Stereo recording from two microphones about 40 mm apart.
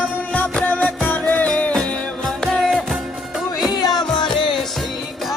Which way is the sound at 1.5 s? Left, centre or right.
Left.